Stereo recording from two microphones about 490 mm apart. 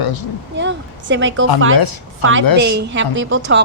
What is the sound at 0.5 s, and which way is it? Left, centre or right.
Speech, right.